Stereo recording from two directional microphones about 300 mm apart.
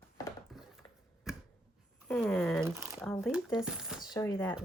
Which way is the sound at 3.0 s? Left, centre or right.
Centre.